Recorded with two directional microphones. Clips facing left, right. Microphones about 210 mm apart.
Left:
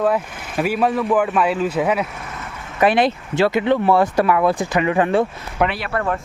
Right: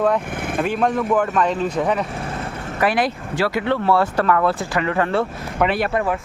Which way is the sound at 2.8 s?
25° left (ahead or behind).